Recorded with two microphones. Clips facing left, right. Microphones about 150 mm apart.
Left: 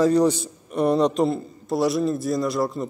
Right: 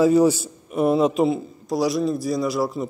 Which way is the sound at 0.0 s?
5° right (ahead or behind).